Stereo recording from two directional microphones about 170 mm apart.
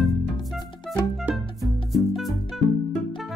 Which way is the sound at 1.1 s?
Centre (ahead or behind).